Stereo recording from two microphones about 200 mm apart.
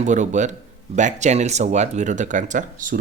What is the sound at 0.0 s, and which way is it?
Speech, 35° right (ahead or behind).